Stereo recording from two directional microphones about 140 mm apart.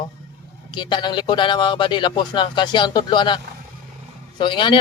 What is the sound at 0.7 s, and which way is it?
A man's voice, 35° left (ahead or behind).